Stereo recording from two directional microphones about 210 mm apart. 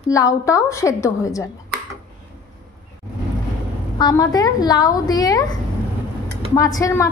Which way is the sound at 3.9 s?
20° left (ahead or behind).